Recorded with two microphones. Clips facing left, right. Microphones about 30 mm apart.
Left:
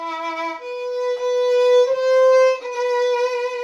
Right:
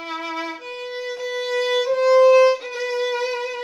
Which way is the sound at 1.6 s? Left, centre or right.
Right.